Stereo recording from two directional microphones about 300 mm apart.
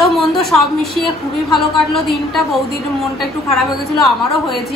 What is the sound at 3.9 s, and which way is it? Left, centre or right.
Speech, centre.